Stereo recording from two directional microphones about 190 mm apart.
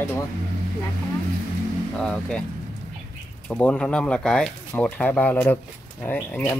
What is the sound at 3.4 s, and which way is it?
Speech, 5° left (ahead or behind).